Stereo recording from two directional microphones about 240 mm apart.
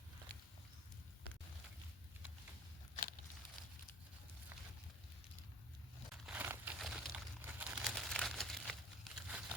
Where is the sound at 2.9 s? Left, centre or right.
Left.